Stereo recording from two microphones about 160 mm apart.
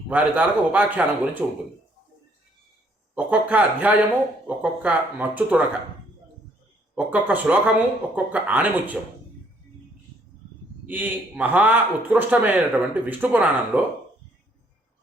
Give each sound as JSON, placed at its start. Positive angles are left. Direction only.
{"t": 0.1, "sound": "a man's voice", "side_deg": -10}
{"t": 3.2, "sound": "a man's voice", "side_deg": -10}
{"t": 6.9, "sound": "a man's voice", "side_deg": -10}
{"t": 10.8, "sound": "a man's voice", "side_deg": -10}